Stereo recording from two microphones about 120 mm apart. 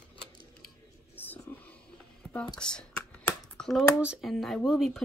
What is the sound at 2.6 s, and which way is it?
Computer keyboard, 5° left (ahead or behind).